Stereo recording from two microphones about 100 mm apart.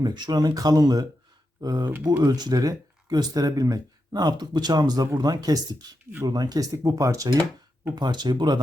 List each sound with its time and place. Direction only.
0.0 s speech: 45° right (ahead or behind)
7.9 s speech: 45° right (ahead or behind)